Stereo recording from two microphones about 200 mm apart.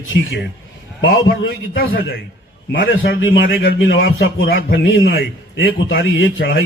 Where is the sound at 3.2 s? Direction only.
75° left (ahead or behind).